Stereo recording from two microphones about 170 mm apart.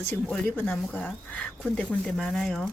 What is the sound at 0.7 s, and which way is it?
Speech, centre (ahead or behind).